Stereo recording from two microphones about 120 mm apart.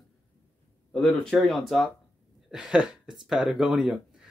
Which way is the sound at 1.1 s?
Centre (ahead or behind).